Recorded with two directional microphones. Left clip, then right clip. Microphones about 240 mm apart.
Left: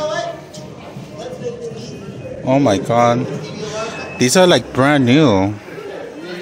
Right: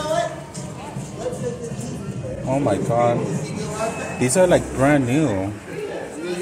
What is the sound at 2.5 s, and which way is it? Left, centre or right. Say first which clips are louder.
Speech: left 6 dB; left.